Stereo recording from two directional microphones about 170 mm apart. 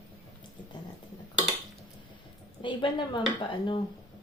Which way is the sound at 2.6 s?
30° left (ahead or behind).